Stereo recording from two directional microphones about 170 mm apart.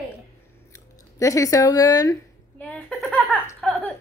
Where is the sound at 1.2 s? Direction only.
20° left (ahead or behind).